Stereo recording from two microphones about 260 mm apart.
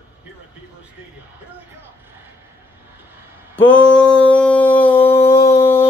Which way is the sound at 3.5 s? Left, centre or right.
Centre.